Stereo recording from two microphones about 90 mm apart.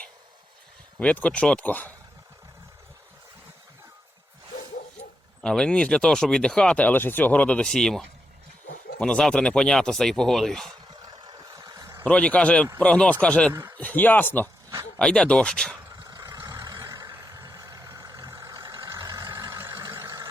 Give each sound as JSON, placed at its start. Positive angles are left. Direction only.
{"t": 0.9, "sound": "speech", "side_deg": 15}
{"t": 5.4, "sound": "speech", "side_deg": 10}
{"t": 11.0, "sound": "a sound", "side_deg": -55}
{"t": 12.0, "sound": "speech", "side_deg": 15}
{"t": 13.5, "sound": "speech", "side_deg": -35}
{"t": 13.7, "sound": "speech", "side_deg": 20}
{"t": 14.9, "sound": "speech", "side_deg": 10}
{"t": 15.9, "sound": "vehicle", "side_deg": -45}